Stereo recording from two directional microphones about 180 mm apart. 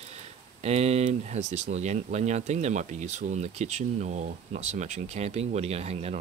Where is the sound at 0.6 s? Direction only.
35° right (ahead or behind).